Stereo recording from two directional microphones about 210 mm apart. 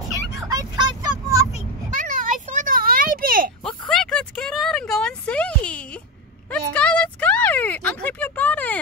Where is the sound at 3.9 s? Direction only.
5° left (ahead or behind).